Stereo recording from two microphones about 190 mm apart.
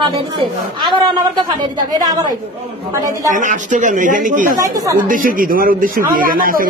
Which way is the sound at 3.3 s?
45° right (ahead or behind).